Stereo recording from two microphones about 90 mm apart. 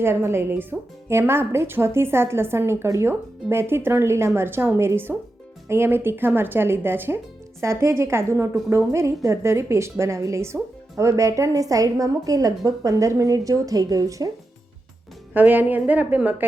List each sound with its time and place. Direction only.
0.0 s a woman's voice: 25° right (ahead or behind)
15.4 s speech: 20° right (ahead or behind)